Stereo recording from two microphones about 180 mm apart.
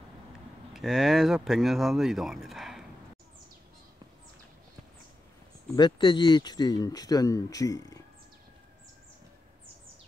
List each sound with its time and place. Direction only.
0.7 s speech: centre (ahead or behind)
5.8 s speech: 25° left (ahead or behind)